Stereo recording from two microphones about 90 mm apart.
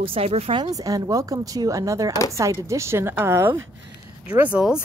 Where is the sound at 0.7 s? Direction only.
40° right (ahead or behind).